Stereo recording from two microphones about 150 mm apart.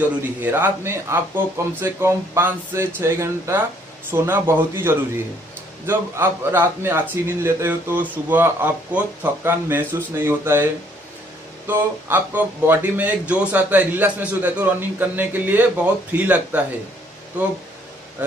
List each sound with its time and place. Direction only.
0.2 s speech: 10° right (ahead or behind)